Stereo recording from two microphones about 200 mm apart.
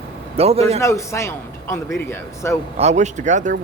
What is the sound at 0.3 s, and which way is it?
Speech, 30° right (ahead or behind).